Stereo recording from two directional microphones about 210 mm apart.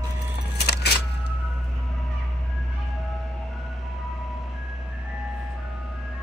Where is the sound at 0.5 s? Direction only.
50° left (ahead or behind).